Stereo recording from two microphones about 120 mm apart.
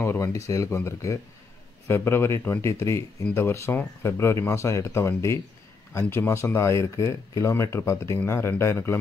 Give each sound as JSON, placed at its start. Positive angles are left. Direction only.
{"t": 0.0, "sound": "speech", "side_deg": 25}